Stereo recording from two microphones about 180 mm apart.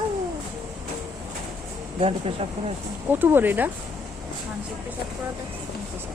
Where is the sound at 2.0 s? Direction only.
30° right (ahead or behind).